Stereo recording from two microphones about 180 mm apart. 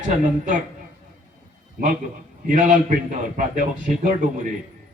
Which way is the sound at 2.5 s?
45° right (ahead or behind).